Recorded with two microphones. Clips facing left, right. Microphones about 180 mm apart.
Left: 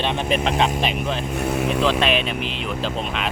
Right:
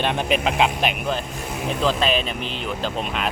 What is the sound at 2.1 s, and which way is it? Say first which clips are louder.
Speech: left 1 dB; 35° right (ahead or behind).